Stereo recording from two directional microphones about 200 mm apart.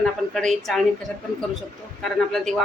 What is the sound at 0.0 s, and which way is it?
Speech, centre (ahead or behind).